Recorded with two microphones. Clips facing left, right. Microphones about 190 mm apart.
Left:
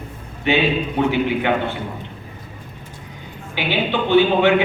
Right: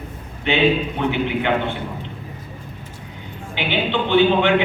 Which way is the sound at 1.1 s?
20° right (ahead or behind).